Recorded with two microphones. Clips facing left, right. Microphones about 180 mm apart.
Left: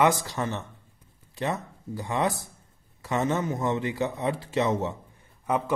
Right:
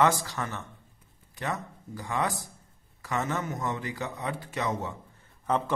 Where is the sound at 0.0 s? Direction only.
20° left (ahead or behind).